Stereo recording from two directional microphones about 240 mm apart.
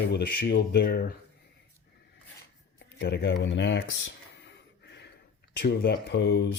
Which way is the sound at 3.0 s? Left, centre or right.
Left.